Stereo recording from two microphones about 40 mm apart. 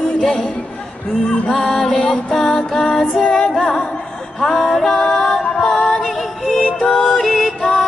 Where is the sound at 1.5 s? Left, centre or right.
Centre.